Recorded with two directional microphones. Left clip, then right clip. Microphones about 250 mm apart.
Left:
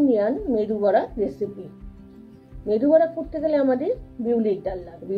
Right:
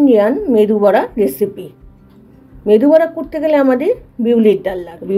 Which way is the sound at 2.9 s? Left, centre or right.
Right.